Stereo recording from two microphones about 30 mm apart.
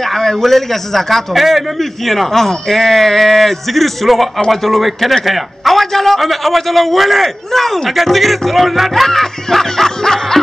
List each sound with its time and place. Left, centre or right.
0.0 s a man's voice: centre
1.3 s a man's voice: centre